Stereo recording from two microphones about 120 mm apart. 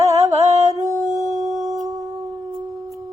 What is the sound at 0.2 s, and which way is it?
Music, 65° right (ahead or behind).